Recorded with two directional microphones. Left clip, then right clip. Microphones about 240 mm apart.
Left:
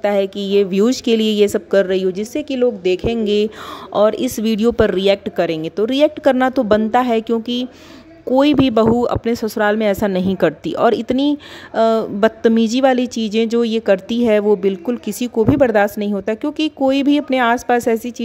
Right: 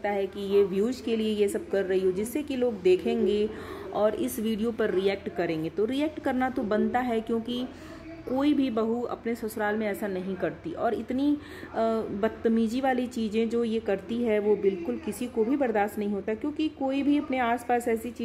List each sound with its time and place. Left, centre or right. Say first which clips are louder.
0.0 s speech: left 12 dB; left